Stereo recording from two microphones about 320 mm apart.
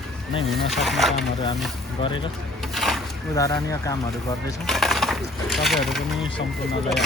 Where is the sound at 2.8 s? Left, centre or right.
Centre.